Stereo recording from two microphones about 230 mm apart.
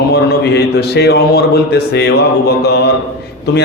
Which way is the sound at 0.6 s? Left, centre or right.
Left.